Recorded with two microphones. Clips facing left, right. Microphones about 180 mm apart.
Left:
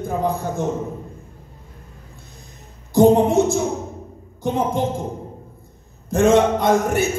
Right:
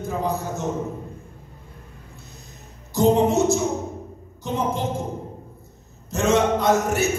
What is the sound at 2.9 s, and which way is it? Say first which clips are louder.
Speech: left 5 dB; 55° left (ahead or behind).